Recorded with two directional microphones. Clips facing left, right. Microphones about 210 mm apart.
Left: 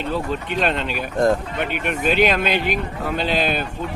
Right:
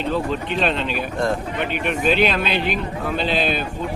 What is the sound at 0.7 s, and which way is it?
Speech, 50° left (ahead or behind).